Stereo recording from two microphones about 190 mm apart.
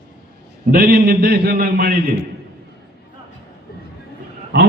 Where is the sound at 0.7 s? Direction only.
55° right (ahead or behind).